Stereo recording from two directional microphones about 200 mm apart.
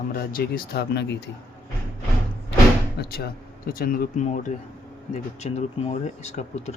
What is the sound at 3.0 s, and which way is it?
Speech, 50° left (ahead or behind).